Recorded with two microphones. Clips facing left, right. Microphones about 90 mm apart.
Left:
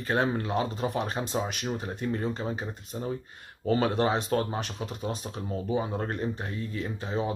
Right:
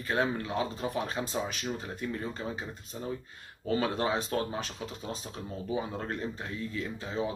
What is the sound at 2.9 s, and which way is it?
Speech, 35° left (ahead or behind).